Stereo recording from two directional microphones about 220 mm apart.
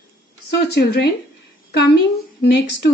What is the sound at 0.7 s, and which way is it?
A woman's voice, 50° left (ahead or behind).